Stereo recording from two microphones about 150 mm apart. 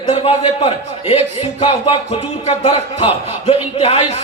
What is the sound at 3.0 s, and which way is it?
A man's voice, 40° left (ahead or behind).